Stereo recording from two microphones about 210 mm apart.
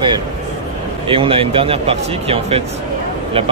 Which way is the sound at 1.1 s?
25° right (ahead or behind).